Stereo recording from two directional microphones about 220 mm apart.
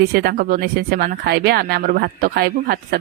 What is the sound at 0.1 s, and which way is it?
A woman's voice, 45° right (ahead or behind).